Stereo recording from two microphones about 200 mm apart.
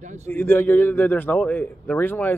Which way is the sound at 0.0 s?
35° right (ahead or behind).